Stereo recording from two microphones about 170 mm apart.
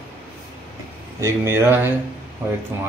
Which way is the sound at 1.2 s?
15° right (ahead or behind).